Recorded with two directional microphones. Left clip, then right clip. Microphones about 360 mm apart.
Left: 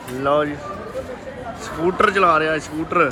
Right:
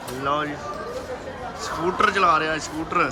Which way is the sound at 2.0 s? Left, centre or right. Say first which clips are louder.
Left 3 dB; centre.